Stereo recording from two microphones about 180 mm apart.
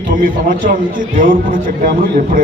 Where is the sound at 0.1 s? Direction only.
50° right (ahead or behind).